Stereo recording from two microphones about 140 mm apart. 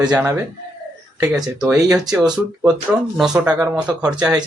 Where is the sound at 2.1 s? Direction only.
5° right (ahead or behind).